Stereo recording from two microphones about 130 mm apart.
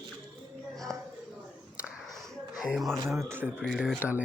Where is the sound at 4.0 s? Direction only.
10° right (ahead or behind).